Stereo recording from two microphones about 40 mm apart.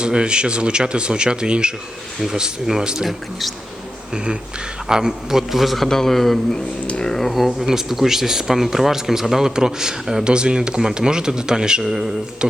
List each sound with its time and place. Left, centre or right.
0.0 s speech: right
4.1 s a man's voice: right; by 6.6 s centre
6.8 s speech: left
7.2 s speech: centre
11.8 s speech: centre
12.4 s speech: right